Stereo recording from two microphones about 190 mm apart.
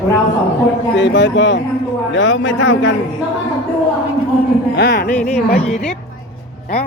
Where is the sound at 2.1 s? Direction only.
90° left.